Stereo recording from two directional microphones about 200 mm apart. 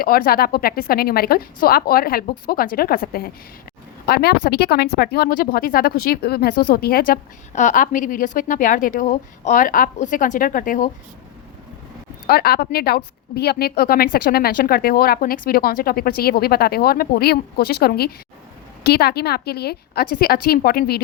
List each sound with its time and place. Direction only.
0.0 s speech: 50° left (ahead or behind)
12.3 s speech: 50° left (ahead or behind)